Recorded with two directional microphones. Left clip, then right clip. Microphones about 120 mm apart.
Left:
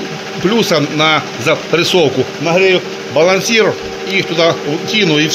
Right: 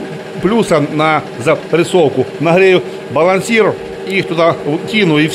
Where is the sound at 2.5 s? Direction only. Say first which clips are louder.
Right 2 dB; 60° right (ahead or behind).